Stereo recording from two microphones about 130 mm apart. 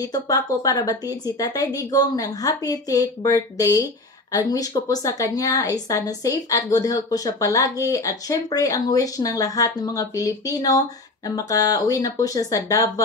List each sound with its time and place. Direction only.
0.0 s speech: 30° left (ahead or behind)